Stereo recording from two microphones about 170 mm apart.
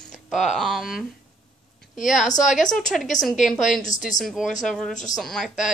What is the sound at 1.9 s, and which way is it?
A woman's voice, centre (ahead or behind).